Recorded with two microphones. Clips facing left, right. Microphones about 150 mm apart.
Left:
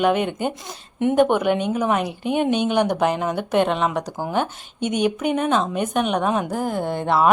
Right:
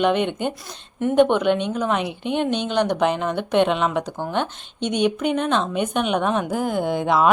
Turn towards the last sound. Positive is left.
turn(degrees=0)  # may be behind; listen again after turning